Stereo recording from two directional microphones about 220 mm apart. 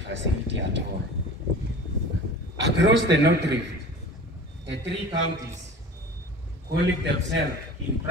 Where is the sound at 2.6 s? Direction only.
55° right (ahead or behind).